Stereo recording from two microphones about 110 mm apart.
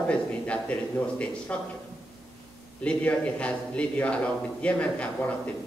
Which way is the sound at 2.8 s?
10° left (ahead or behind).